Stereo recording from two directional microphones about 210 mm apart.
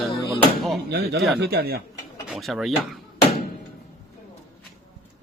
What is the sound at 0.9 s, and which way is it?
Speech, 50° right (ahead or behind).